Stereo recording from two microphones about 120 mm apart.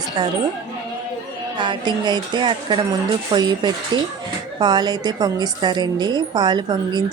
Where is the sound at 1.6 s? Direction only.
40° right (ahead or behind).